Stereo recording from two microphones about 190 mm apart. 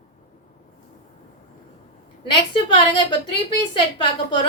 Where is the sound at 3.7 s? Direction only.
25° left (ahead or behind).